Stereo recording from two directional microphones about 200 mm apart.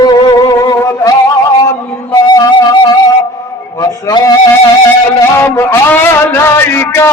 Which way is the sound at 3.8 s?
20° left (ahead or behind).